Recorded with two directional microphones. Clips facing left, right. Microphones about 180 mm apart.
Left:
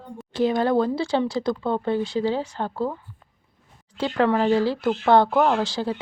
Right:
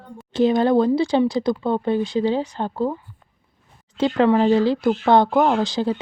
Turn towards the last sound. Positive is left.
turn(degrees=-20)  # may be behind; listen again after turning